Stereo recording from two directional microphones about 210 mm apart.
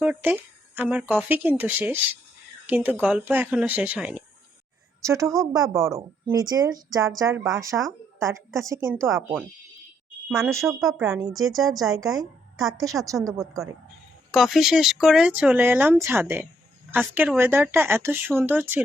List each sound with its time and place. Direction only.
0.0 s speech: 5° right (ahead or behind)
5.2 s speech: centre (ahead or behind)
5.5 s speech: 15° right (ahead or behind)
10.8 s speech: centre (ahead or behind)
11.0 s speech: 15° right (ahead or behind)
11.3 s a woman's voice: centre (ahead or behind)
12.7 s speech: 15° right (ahead or behind)
13.4 s speech: centre (ahead or behind)